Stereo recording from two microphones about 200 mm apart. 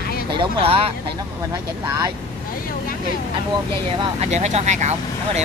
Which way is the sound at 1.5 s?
15° right (ahead or behind).